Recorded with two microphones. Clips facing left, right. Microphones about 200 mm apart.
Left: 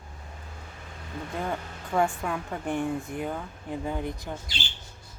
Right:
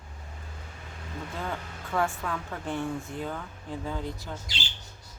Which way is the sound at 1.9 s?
15° left (ahead or behind).